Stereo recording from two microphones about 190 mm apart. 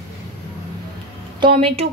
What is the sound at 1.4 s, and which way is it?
Speech, 30° right (ahead or behind).